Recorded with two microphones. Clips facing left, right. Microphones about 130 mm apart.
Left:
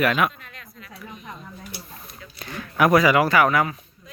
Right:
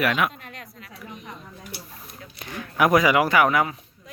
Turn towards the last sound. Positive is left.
turn(degrees=-15)  # may be behind; listen again after turning